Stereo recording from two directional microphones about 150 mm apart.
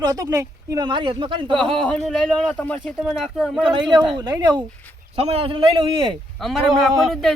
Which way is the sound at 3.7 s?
30° right (ahead or behind).